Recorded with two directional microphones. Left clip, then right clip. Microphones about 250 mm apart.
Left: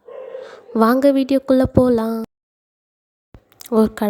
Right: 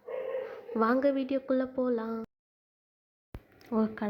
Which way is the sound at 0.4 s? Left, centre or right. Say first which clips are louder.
Left 14 dB; left.